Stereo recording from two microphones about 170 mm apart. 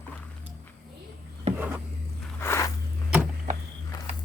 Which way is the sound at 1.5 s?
40° right (ahead or behind).